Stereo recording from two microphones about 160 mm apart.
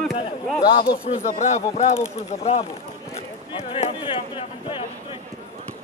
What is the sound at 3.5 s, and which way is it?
A man's voice, 35° left (ahead or behind).